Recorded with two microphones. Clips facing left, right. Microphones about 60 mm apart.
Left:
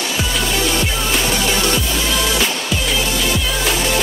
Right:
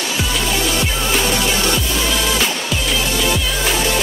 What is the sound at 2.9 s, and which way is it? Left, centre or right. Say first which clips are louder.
Music: right 1 dB; centre.